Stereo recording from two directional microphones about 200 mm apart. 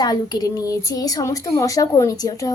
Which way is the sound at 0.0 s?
20° left (ahead or behind).